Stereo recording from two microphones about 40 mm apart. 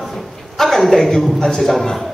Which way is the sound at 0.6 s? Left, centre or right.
Centre.